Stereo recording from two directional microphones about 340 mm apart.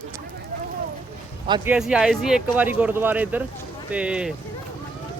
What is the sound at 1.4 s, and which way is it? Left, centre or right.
Speech, centre.